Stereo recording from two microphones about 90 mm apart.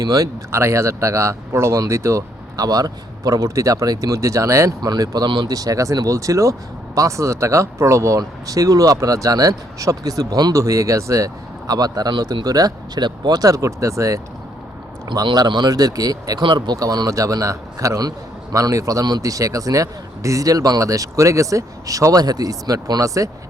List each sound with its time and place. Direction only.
0.0 s speech: 40° right (ahead or behind)
4.9 s speech: 45° right (ahead or behind)
10.5 s speech: 35° right (ahead or behind)
15.0 s speech: 50° right (ahead or behind)
16.4 s speech: 60° right (ahead or behind); by 23.3 s 40° right (ahead or behind)